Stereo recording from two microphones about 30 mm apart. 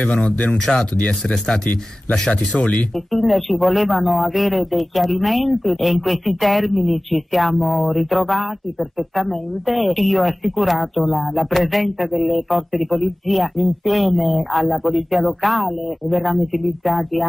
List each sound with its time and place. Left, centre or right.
0.0 s speech: left
0.7 s speech: centre
2.6 s speech: left
3.1 s a man's voice: centre